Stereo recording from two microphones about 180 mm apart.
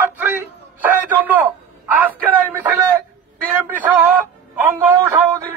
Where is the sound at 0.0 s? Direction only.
10° right (ahead or behind).